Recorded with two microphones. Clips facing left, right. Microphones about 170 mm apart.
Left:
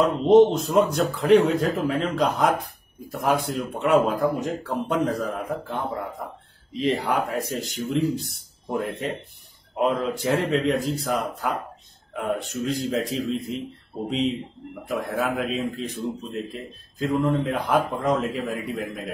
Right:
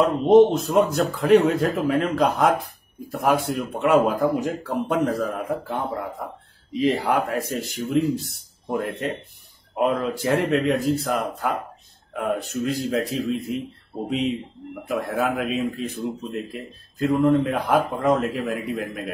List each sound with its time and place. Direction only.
0.0 s speech: centre (ahead or behind)
1.4 s speech: 55° right (ahead or behind)
1.7 s speech: centre (ahead or behind)